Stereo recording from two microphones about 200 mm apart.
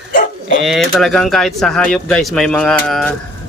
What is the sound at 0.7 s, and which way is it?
Speech, centre (ahead or behind).